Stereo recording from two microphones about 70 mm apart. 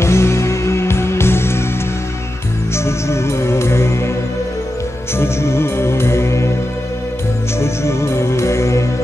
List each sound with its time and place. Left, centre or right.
0.0 s music: left
2.7 s music: left
5.1 s music: left
7.6 s music: left